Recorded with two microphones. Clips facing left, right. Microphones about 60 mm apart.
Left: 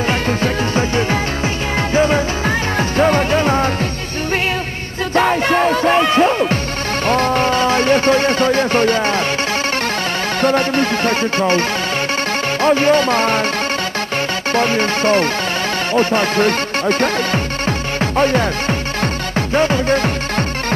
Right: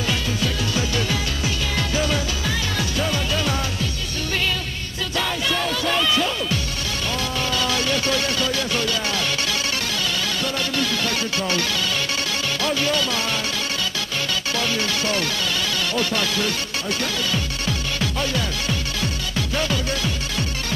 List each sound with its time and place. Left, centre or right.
0.1 s music: left
5.1 s music: left
7.1 s speech: left
10.4 s music: left
12.6 s music: left
14.5 s music: left